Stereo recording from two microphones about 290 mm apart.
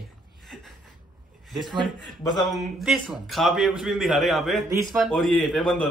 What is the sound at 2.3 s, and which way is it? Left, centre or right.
A man's voice, centre.